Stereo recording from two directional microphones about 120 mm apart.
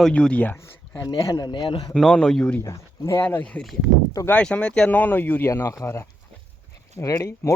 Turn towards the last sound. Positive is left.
turn(degrees=25)  # may be behind; listen again after turning